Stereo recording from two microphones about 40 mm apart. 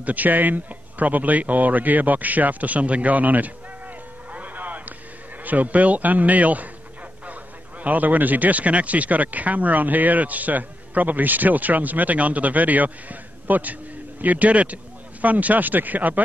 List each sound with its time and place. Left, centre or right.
0.0 s a man's voice: right
7.8 s a man's voice: right